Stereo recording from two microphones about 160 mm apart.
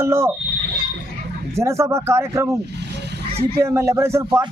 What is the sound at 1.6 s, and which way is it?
Speech, 20° right (ahead or behind).